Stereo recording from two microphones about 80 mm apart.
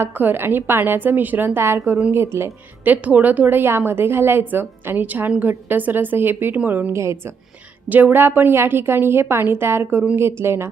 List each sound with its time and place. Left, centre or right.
0.0 s a woman's voice: right
6.9 s speech: right
7.9 s a woman's voice: right